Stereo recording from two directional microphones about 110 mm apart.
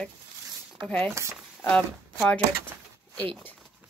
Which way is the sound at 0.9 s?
15° left (ahead or behind).